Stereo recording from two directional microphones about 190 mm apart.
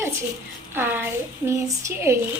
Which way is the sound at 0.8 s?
10° right (ahead or behind).